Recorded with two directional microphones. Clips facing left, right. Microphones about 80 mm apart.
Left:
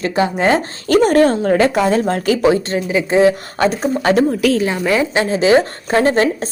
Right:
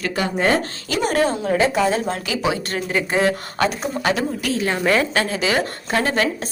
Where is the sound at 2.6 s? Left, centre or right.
Left.